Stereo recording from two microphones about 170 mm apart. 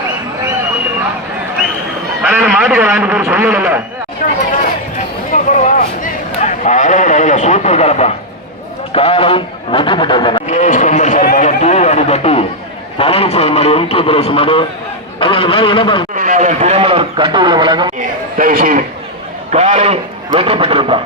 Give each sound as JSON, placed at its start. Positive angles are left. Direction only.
{"t": 2.2, "sound": "a man's voice", "side_deg": -10}
{"t": 5.3, "sound": "a sound", "side_deg": 50}
{"t": 8.9, "sound": "speech", "side_deg": 35}
{"t": 10.5, "sound": "speech", "side_deg": 45}
{"t": 11.3, "sound": "a sound", "side_deg": 40}
{"t": 13.0, "sound": "a man's voice", "side_deg": 35}
{"t": 16.1, "sound": "a man's voice", "side_deg": -50}
{"t": 18.3, "sound": "a man's voice", "side_deg": -55}